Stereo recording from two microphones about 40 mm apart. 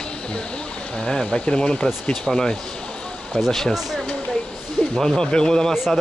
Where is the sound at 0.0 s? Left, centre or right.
Left.